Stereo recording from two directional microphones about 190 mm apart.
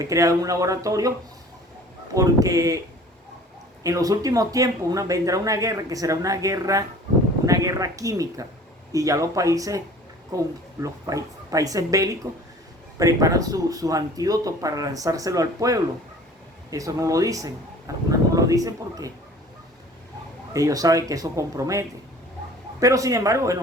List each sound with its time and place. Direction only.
0.0 s speech: 15° right (ahead or behind)
2.1 s speech: 20° right (ahead or behind)
3.8 s speech: 15° right (ahead or behind)
20.5 s speech: 15° right (ahead or behind)